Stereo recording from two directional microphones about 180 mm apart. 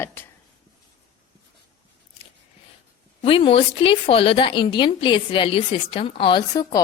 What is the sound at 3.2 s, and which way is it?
A woman's voice, 30° left (ahead or behind).